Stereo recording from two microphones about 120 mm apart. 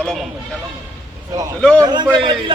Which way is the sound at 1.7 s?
35° right (ahead or behind).